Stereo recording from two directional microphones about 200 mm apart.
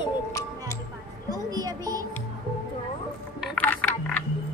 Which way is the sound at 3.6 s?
10° left (ahead or behind).